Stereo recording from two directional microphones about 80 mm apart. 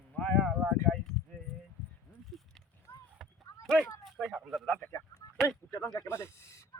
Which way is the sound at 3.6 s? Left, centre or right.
Centre.